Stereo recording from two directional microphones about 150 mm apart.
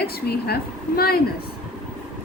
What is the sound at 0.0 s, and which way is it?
A woman's voice, 90° left.